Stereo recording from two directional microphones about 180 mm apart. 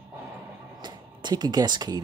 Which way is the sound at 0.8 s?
25° right (ahead or behind).